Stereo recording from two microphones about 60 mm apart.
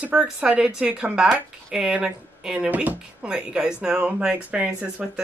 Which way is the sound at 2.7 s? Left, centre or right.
Right.